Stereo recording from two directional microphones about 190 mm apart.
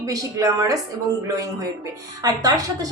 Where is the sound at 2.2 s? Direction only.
20° right (ahead or behind).